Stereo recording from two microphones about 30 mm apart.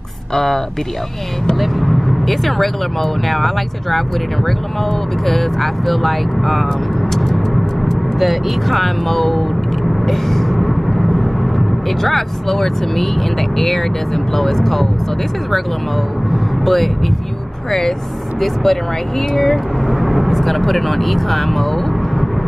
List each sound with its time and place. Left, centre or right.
0.3 s speech: centre
1.6 s speech: centre
5.2 s speech: centre
8.2 s speech: centre
10.0 s vehicle: centre
13.6 s speech: centre
16.6 s speech: centre
17.6 s speech: centre
19.9 s vehicle: centre
20.2 s speech: centre